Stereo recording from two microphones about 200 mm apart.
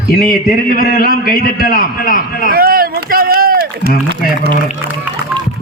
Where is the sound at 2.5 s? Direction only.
45° right (ahead or behind).